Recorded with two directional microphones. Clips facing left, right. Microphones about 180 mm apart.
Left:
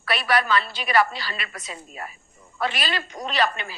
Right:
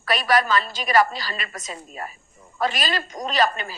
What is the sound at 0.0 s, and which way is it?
A woman's voice, 40° right (ahead or behind).